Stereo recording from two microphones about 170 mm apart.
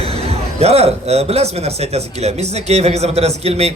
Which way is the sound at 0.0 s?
35° right (ahead or behind).